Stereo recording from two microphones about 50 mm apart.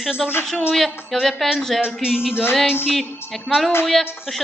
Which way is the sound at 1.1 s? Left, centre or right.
Centre.